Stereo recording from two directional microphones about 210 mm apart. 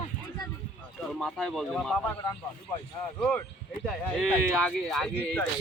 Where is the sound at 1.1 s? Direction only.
Centre (ahead or behind).